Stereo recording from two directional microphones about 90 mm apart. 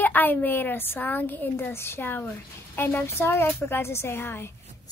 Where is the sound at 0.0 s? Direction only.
20° left (ahead or behind).